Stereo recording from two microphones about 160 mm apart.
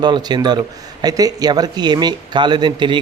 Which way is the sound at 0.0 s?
25° right (ahead or behind).